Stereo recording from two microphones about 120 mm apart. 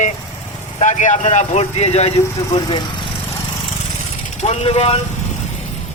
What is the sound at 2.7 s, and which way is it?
Speech, 40° left (ahead or behind).